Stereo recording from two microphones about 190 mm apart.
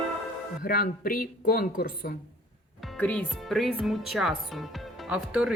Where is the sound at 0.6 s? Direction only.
50° left (ahead or behind).